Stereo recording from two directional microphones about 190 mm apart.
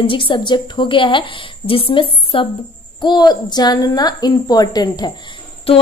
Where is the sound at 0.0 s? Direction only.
25° left (ahead or behind).